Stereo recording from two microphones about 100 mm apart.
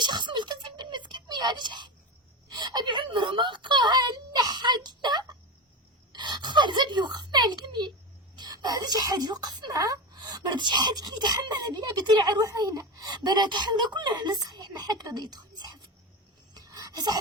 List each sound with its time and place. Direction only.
0.0 s music: 50° right (ahead or behind)
2.5 s whimper: 45° right (ahead or behind)
6.1 s a sound: 50° right (ahead or behind)